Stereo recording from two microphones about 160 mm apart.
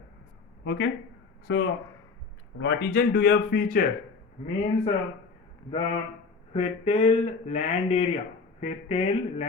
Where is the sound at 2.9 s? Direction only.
75° left (ahead or behind).